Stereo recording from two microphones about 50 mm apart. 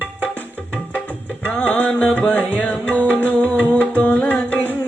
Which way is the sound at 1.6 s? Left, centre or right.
Left.